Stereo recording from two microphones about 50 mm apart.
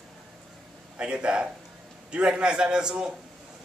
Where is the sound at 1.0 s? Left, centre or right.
Right.